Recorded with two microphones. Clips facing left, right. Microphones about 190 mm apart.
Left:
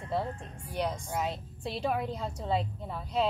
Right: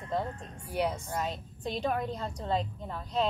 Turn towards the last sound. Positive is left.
turn(degrees=5)  # may be behind; listen again after turning